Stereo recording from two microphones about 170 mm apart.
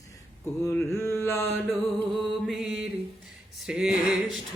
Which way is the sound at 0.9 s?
15° left (ahead or behind).